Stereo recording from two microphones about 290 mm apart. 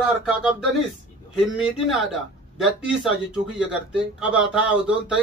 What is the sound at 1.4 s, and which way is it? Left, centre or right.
Speech, centre.